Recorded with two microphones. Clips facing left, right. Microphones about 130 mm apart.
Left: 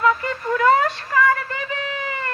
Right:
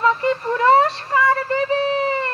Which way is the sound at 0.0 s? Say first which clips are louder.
Right 2 dB; 30° right (ahead or behind).